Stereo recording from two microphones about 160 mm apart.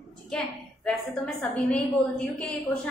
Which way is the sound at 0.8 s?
5° left (ahead or behind).